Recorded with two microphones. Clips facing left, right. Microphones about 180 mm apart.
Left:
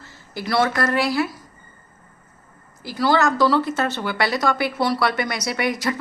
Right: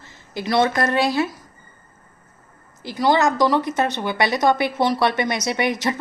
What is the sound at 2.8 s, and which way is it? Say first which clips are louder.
Speech: right 1 dB; 20° right (ahead or behind).